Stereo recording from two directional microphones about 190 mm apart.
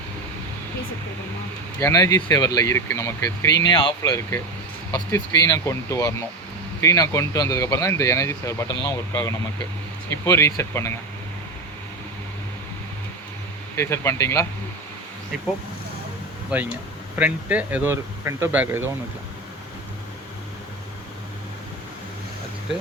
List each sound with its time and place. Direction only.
1.8 s speech: 20° left (ahead or behind)
13.7 s speech: 15° left (ahead or behind)
17.2 s speech: 10° right (ahead or behind)